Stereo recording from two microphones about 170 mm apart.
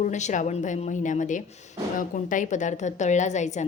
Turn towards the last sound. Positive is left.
turn(degrees=45)  # may be behind; listen again after turning